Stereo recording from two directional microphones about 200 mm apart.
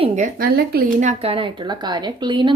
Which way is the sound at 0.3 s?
50° right (ahead or behind).